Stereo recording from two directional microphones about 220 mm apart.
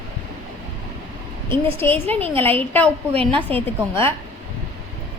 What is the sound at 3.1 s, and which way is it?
Speech, 25° right (ahead or behind).